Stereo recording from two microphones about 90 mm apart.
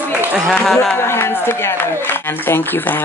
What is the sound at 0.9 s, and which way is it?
A man's voice, 25° left (ahead or behind).